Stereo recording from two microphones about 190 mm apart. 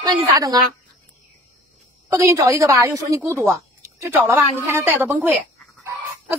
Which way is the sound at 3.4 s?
15° right (ahead or behind).